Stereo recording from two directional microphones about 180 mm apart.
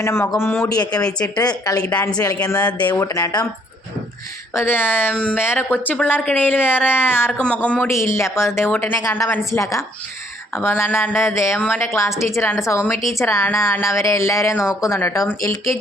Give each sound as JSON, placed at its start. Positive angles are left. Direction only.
{"t": 0.0, "sound": "a woman's voice", "side_deg": 15}
{"t": 1.8, "sound": "a woman's voice", "side_deg": 5}
{"t": 4.5, "sound": "a woman's voice", "side_deg": 10}